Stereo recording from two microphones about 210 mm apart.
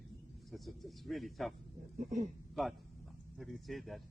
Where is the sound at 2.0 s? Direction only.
35° right (ahead or behind).